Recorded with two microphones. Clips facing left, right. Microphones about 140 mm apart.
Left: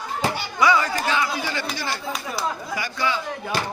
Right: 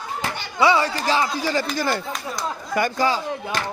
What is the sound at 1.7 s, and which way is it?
Speech, 50° right (ahead or behind).